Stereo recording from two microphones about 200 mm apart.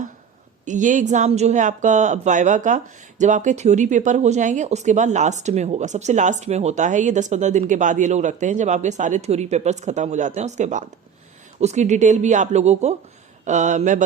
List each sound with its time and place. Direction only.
0.6 s speech: 40° right (ahead or behind)